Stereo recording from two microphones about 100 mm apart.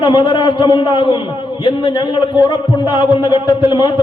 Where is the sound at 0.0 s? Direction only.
45° left (ahead or behind).